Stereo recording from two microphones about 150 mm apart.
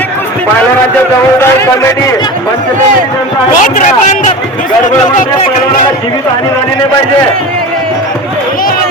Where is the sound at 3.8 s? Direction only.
55° left (ahead or behind).